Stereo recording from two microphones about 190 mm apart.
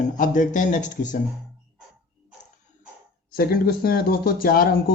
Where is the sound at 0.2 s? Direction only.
45° left (ahead or behind).